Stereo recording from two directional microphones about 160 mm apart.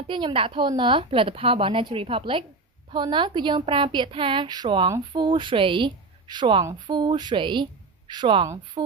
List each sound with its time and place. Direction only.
0.1 s a woman's voice: 30° right (ahead or behind)